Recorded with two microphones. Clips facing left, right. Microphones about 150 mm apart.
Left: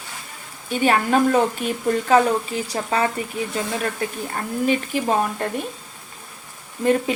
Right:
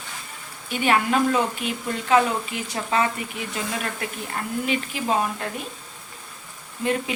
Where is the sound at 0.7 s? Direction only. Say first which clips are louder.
Left 3 dB; 35° left (ahead or behind).